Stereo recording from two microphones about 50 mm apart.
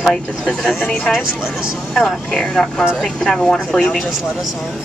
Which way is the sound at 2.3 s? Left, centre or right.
Centre.